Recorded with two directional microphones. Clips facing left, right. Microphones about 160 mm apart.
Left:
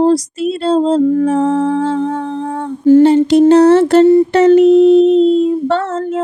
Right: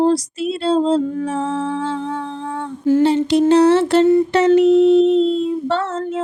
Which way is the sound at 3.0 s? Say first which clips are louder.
Left 6 dB; 50° left (ahead or behind).